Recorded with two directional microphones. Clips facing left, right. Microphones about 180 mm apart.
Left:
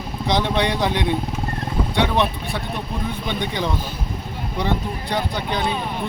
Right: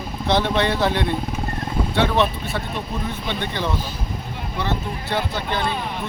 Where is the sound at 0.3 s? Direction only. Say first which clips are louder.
Right 1 dB; 15° left (ahead or behind).